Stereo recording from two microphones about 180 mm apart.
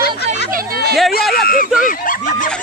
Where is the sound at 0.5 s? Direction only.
60° right (ahead or behind).